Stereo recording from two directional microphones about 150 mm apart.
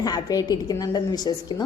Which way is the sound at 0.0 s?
25° left (ahead or behind).